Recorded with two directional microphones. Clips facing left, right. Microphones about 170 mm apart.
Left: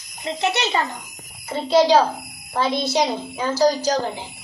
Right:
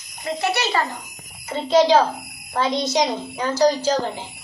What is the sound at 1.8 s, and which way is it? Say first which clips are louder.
Speech: even; 10° left (ahead or behind).